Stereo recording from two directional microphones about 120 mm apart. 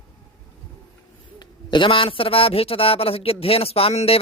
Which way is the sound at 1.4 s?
40° left (ahead or behind).